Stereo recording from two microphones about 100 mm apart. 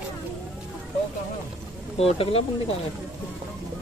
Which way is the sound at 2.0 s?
70° left (ahead or behind).